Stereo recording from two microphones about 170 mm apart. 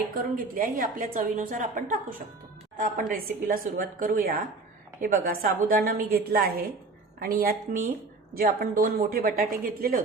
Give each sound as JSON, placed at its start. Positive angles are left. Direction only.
{"t": 0.2, "sound": "a woman's voice", "side_deg": -55}